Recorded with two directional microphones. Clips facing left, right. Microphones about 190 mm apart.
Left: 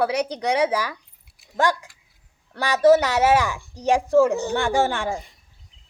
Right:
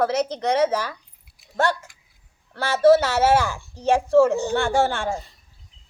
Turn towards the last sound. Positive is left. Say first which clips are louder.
# even
turn(degrees=15)  # may be behind; listen again after turning